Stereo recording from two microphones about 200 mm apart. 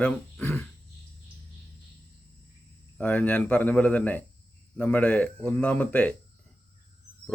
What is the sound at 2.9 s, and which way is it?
Speech, 5° left (ahead or behind).